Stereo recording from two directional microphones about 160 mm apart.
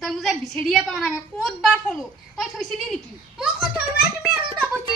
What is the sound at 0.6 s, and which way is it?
A child's voice, centre (ahead or behind).